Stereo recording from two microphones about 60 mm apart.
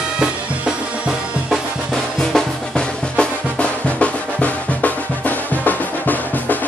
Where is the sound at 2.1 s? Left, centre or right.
Centre.